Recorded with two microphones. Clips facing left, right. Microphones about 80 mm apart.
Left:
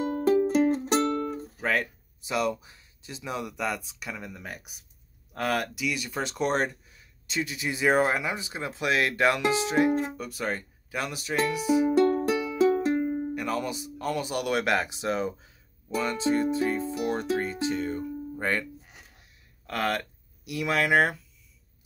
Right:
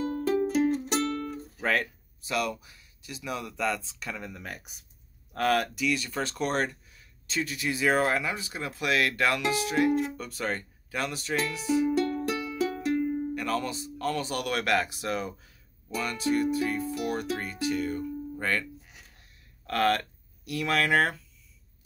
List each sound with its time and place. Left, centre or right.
0.0 s music: left
1.6 s music: centre
2.2 s speech: left
10.1 s speech: centre
12.3 s music: centre
13.3 s speech: centre
19.6 s speech: centre